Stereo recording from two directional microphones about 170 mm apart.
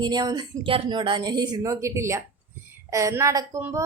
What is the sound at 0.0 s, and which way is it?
A woman's voice, 25° right (ahead or behind).